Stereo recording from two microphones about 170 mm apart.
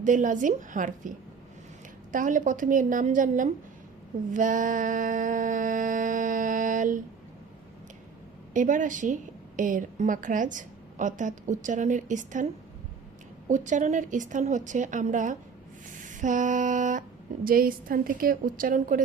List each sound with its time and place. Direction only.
0.0 s a woman's voice: 50° right (ahead or behind)
2.1 s a woman's voice: 50° right (ahead or behind)
4.3 s a sound: 50° right (ahead or behind)
8.5 s a woman's voice: 50° right (ahead or behind)
13.5 s a woman's voice: 45° right (ahead or behind)
16.0 s female singing: 50° right (ahead or behind)
17.4 s a woman's voice: 60° right (ahead or behind)